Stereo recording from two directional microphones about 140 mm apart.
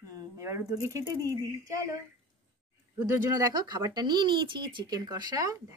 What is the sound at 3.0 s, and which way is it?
Speech, 20° right (ahead or behind).